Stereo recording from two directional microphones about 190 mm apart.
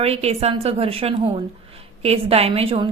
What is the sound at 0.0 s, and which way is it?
A woman's voice, 35° right (ahead or behind).